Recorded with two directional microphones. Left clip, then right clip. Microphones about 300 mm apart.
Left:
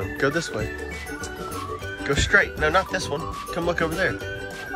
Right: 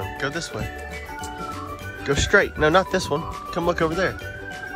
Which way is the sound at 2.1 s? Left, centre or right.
Centre.